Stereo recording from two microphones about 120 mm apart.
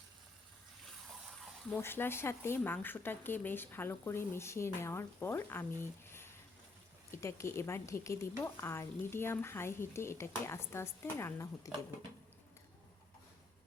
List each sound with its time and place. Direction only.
1.7 s speech: 20° left (ahead or behind)